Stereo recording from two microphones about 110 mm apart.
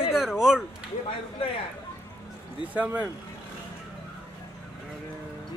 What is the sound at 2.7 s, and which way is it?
Speech, 15° right (ahead or behind).